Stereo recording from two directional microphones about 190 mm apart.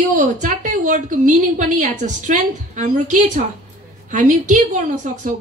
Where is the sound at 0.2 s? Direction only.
40° right (ahead or behind).